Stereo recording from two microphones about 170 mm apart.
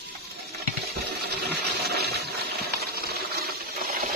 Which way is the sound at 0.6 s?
75° right (ahead or behind).